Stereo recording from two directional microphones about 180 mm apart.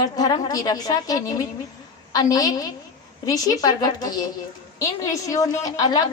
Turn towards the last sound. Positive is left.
turn(degrees=20)  # may be behind; listen again after turning